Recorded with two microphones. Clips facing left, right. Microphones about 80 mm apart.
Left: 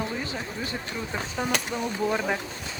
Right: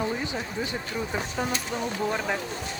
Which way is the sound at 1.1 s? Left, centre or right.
Centre.